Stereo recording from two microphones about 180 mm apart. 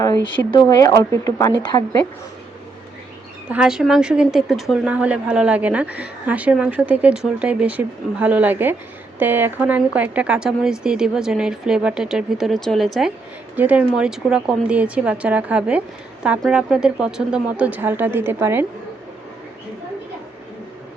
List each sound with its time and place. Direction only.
0.0 s a woman's voice: 20° left (ahead or behind)
3.5 s a woman's voice: 5° right (ahead or behind)